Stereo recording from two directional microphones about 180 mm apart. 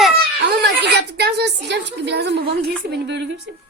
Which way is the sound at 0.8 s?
65° right (ahead or behind).